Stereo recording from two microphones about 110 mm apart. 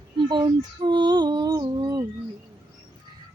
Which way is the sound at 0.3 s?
40° right (ahead or behind).